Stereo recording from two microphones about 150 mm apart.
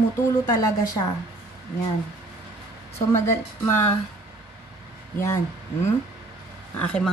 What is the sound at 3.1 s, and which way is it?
Speech, 15° left (ahead or behind).